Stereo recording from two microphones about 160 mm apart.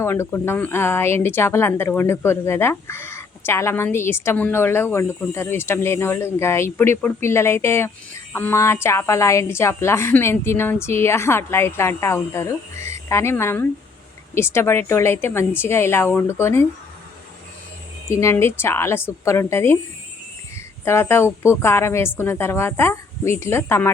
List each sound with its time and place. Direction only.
0.0 s a woman's voice: 15° left (ahead or behind)
18.1 s a woman's voice: 15° left (ahead or behind)
20.8 s a woman's voice: 15° left (ahead or behind)